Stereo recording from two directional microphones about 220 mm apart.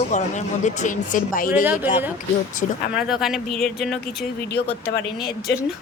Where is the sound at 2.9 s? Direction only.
5° right (ahead or behind).